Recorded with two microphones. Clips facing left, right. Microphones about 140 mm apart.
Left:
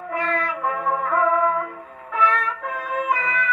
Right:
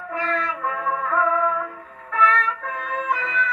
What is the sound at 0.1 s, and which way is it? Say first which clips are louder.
Music: left 1 dB; 10° left (ahead or behind).